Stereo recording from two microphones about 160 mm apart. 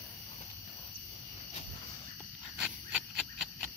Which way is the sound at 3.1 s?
Centre (ahead or behind).